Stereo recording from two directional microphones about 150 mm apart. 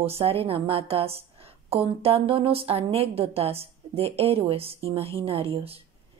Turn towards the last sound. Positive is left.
turn(degrees=-40)  # may be behind; listen again after turning